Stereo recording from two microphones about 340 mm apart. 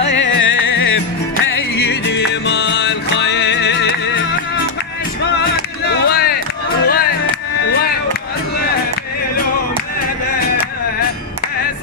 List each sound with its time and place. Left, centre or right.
0.0 s music: left
5.9 s a sound: left
6.8 s music: left